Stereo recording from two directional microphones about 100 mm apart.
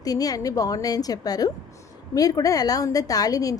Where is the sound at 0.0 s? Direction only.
40° left (ahead or behind).